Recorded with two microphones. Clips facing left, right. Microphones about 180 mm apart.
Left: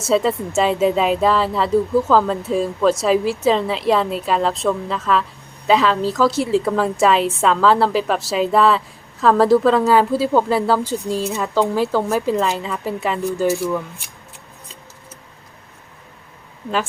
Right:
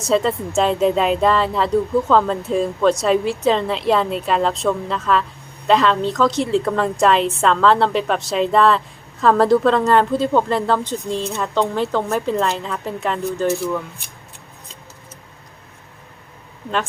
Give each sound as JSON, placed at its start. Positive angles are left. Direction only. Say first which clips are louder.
{"t": 0.0, "sound": "speech", "louder": "left 1 dB", "side_deg": 5}